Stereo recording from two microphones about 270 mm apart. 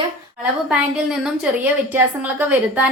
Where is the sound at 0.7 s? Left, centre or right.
Centre.